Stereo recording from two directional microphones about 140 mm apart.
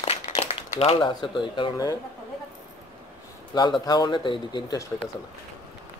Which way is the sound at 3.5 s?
30° left (ahead or behind).